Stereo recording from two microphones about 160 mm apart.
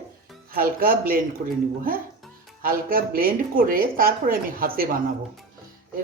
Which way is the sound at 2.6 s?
65° right (ahead or behind).